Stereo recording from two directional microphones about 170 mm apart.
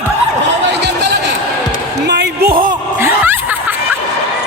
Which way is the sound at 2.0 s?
90° right.